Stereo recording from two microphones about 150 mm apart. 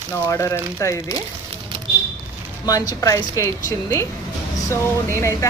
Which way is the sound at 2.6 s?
25° left (ahead or behind).